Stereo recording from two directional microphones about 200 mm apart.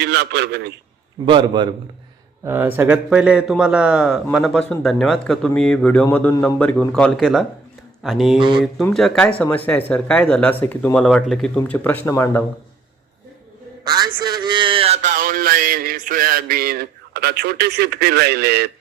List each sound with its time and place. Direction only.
0.0 s a man's voice: 55° right (ahead or behind)
1.2 s a man's voice: 25° right (ahead or behind)
2.4 s a man's voice: 10° right (ahead or behind)
8.4 s a man's voice: 25° right (ahead or behind)
8.6 s a man's voice: centre (ahead or behind)
13.8 s a man's voice: 20° right (ahead or behind); by 18.7 s 55° right (ahead or behind)